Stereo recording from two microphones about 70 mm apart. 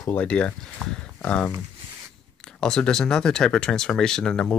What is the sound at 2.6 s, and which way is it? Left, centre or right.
Speech, centre.